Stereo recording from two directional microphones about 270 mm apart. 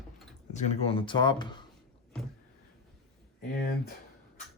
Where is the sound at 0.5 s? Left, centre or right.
Left.